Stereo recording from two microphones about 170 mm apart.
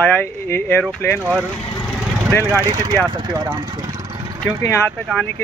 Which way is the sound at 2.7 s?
25° right (ahead or behind).